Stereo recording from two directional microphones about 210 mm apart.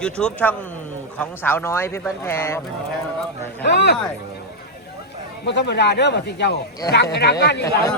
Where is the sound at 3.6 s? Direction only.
55° left (ahead or behind).